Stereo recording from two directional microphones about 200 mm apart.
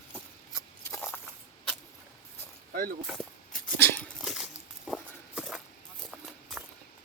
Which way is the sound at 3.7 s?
10° left (ahead or behind).